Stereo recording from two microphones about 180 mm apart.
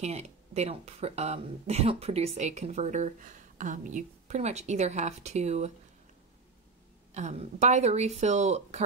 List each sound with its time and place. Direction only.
0.0 s speech: 35° right (ahead or behind)
7.2 s speech: 40° right (ahead or behind)